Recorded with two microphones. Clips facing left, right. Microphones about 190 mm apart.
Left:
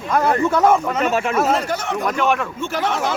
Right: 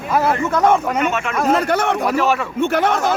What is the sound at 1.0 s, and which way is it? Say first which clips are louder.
Speech: left 1 dB; 35° left (ahead or behind).